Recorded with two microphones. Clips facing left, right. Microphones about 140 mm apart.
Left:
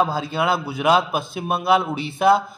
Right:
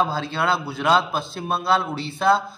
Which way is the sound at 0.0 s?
10° left (ahead or behind).